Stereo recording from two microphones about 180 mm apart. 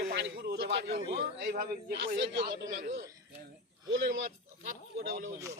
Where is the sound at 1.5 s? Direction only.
55° right (ahead or behind).